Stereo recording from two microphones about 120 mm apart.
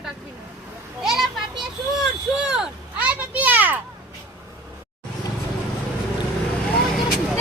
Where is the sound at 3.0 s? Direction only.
15° right (ahead or behind).